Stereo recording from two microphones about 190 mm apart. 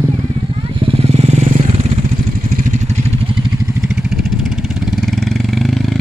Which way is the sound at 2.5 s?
40° right (ahead or behind).